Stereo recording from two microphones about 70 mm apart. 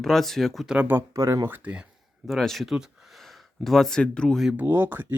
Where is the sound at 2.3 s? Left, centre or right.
Centre.